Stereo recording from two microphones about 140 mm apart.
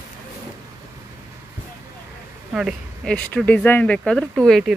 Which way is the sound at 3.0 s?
10° left (ahead or behind).